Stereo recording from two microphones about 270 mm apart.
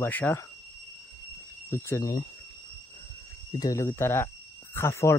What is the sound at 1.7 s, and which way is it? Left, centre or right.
Speech, centre.